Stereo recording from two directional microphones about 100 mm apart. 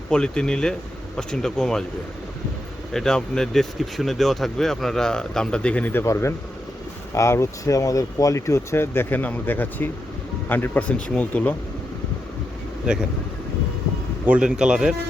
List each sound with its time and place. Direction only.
0.1 s speech: 10° left (ahead or behind)
2.9 s speech: 5° left (ahead or behind)
12.9 s a man's voice: 10° right (ahead or behind)
14.3 s a man's voice: 10° right (ahead or behind)